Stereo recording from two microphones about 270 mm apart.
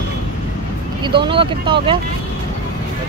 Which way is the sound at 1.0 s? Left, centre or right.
Centre.